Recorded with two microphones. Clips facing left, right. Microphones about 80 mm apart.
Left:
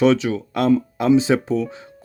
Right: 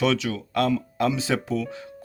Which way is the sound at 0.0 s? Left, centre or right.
Left.